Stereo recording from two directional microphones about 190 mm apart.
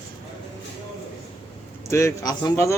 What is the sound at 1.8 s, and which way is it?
Speech, 15° left (ahead or behind).